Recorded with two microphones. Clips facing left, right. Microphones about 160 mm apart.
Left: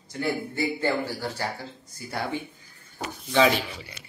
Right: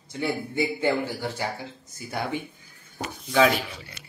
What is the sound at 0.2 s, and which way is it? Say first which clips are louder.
Speech: right 1 dB; 20° right (ahead or behind).